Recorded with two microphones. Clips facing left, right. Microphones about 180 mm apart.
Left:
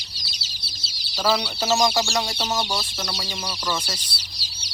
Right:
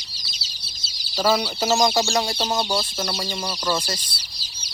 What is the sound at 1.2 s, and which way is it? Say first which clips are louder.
Speech: right 2 dB; 5° right (ahead or behind).